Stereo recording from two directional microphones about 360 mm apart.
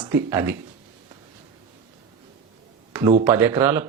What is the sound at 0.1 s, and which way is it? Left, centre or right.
Speech, centre.